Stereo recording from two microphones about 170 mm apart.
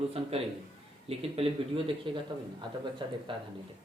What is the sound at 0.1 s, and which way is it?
Speech, 35° right (ahead or behind).